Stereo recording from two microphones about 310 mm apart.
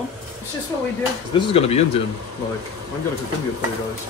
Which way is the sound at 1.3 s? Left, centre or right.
Centre.